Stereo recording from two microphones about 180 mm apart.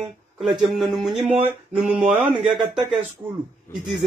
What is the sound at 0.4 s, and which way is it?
Speech, centre (ahead or behind).